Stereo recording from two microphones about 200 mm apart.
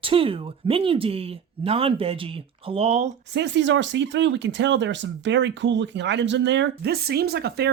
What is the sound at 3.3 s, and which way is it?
Speech, 60° right (ahead or behind).